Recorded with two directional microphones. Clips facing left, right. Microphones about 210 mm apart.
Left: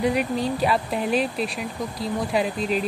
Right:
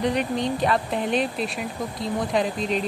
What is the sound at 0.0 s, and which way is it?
Speech, 5° left (ahead or behind).